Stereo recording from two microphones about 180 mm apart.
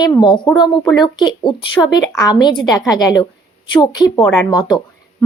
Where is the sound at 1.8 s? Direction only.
15° left (ahead or behind).